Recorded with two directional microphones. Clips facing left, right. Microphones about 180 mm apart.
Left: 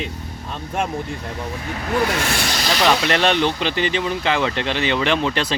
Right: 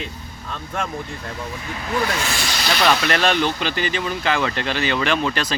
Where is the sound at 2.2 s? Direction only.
55° left (ahead or behind).